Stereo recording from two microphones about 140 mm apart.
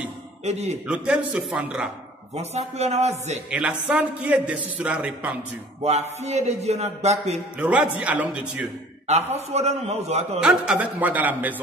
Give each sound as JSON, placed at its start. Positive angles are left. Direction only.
{"t": 0.8, "sound": "a man's voice", "side_deg": -10}
{"t": 2.3, "sound": "a man's voice", "side_deg": -50}
{"t": 3.4, "sound": "a man's voice", "side_deg": -10}
{"t": 5.8, "sound": "a man's voice", "side_deg": -50}
{"t": 7.5, "sound": "a man's voice", "side_deg": -10}
{"t": 9.3, "sound": "a man's voice", "side_deg": -50}
{"t": 10.4, "sound": "a man's voice", "side_deg": -5}